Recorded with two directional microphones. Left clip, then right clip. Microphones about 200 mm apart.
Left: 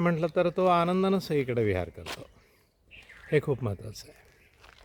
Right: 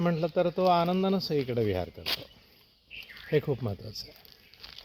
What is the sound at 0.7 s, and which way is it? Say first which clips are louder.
Speech: left 1 dB; 20° left (ahead or behind).